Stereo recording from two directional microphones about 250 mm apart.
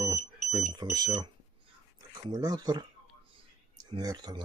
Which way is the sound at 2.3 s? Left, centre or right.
Centre.